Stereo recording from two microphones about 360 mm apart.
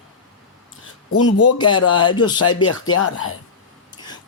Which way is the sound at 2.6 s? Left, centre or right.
Left.